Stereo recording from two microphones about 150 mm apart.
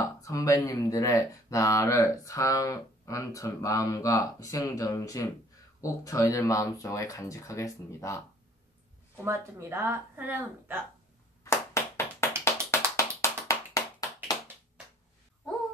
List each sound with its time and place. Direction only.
0.2 s speech: 20° left (ahead or behind)
9.1 s speech: 15° right (ahead or behind)
11.4 s a sound: 15° left (ahead or behind)
12.7 s music: 20° left (ahead or behind)
13.2 s clapping: 20° left (ahead or behind)